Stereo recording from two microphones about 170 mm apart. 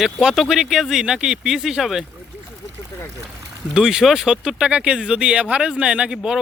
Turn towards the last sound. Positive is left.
turn(degrees=-5)  # may be behind; listen again after turning